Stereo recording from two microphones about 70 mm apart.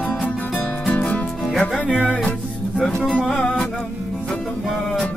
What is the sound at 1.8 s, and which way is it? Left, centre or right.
Music, centre.